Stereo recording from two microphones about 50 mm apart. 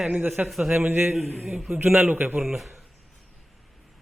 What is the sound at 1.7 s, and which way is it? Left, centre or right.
Speech, right.